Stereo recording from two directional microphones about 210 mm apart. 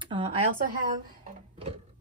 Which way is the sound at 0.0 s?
25° right (ahead or behind).